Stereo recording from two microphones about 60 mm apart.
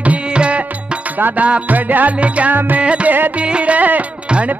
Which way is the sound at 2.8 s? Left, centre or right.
Centre.